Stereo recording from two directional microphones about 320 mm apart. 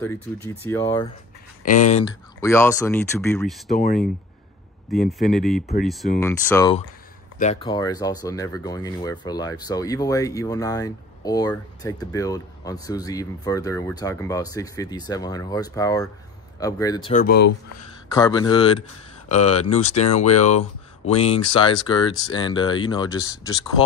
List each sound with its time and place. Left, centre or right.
0.0 s speech: centre
1.6 s speech: left
2.4 s speech: centre
3.7 s speech: left
4.9 s speech: centre
17.1 s speech: left
18.1 s speech: centre